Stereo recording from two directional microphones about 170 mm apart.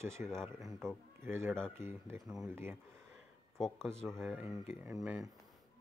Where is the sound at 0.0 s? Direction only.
15° right (ahead or behind).